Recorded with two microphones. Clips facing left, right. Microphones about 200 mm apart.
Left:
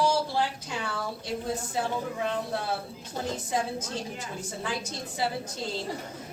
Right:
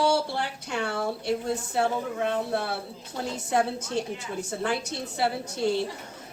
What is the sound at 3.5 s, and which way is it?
Speech, 65° right (ahead or behind).